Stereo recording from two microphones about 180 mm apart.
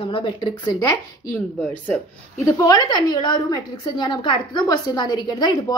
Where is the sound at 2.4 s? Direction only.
20° left (ahead or behind).